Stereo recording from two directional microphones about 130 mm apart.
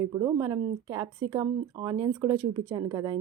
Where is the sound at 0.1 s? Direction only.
25° right (ahead or behind).